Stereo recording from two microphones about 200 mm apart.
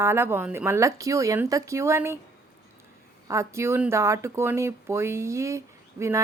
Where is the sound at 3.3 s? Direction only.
15° right (ahead or behind).